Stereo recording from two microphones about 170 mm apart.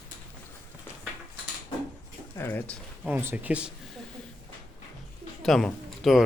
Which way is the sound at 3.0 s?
10° right (ahead or behind).